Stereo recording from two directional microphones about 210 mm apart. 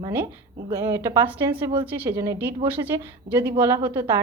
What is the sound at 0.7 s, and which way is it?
A woman's voice, 15° right (ahead or behind).